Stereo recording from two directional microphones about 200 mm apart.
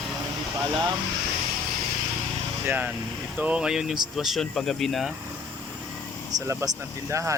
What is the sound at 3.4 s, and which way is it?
Speech, 5° right (ahead or behind).